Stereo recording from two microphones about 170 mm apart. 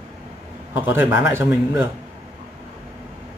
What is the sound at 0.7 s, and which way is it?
Speech, 15° right (ahead or behind).